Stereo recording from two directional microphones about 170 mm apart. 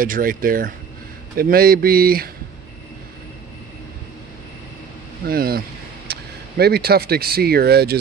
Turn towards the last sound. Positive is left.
turn(degrees=-70)  # may be behind; listen again after turning